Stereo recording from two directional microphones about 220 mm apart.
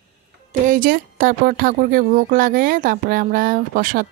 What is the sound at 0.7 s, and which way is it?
A woman's voice, 40° right (ahead or behind).